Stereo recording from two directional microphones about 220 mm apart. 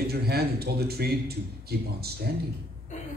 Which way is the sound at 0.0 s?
45° right (ahead or behind).